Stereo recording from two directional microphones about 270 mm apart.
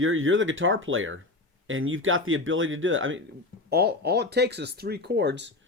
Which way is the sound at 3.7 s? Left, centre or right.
Right.